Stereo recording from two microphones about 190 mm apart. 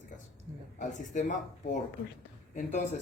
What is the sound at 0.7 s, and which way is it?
Speech, 40° left (ahead or behind).